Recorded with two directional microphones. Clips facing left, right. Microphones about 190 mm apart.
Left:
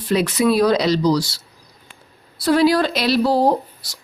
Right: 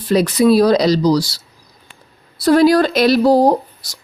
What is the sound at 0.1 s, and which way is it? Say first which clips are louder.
Speech: right 5 dB; 35° right (ahead or behind).